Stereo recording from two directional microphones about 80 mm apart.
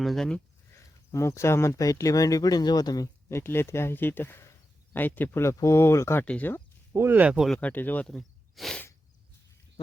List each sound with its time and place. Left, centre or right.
0.0 s speech: centre
1.1 s speech: left
3.2 s speech: left
6.2 s speech: centre
6.9 s speech: right
7.2 s speech: centre
7.6 s speech: left
8.0 s a sound: centre